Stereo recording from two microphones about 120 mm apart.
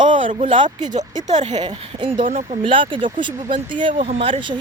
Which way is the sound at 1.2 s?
75° right (ahead or behind).